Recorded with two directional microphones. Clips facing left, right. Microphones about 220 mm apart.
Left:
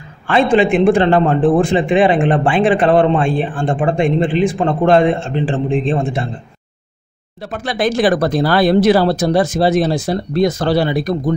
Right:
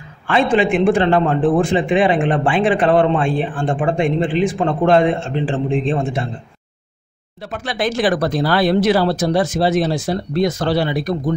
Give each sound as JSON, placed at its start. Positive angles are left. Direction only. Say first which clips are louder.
{"t": 0.3, "sound": "a man's voice", "louder": "left 3 dB", "side_deg": 30}
{"t": 7.4, "sound": "speech", "louder": "left 3 dB", "side_deg": 40}